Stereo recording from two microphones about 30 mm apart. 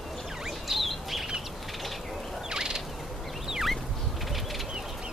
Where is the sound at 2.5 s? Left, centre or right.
Right.